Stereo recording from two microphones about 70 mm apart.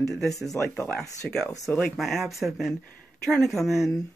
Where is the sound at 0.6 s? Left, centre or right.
Left.